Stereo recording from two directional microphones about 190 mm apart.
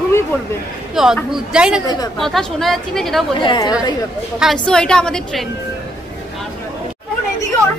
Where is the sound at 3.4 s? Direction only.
25° left (ahead or behind).